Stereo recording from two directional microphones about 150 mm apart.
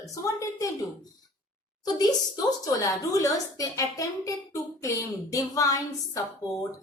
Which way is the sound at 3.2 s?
20° left (ahead or behind).